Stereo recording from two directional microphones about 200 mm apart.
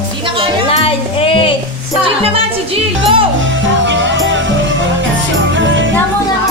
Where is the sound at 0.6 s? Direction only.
30° left (ahead or behind).